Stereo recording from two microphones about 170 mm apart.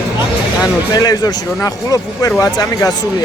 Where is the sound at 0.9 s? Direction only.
25° left (ahead or behind).